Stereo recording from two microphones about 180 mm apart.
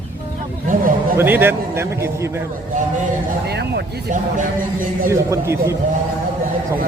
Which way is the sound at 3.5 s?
65° right (ahead or behind).